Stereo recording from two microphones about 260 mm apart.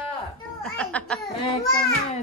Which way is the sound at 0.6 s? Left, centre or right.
Centre.